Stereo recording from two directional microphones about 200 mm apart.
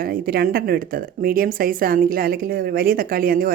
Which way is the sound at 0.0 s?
45° right (ahead or behind).